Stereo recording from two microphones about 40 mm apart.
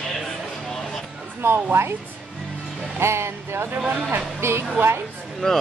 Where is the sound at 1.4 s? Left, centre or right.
Right.